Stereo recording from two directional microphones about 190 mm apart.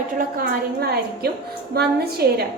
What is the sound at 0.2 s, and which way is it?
A woman's voice, 55° right (ahead or behind).